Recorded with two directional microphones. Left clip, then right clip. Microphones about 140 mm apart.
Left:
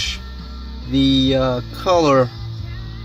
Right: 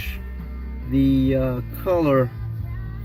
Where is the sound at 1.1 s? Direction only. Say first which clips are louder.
Left 5 dB; 10° left (ahead or behind).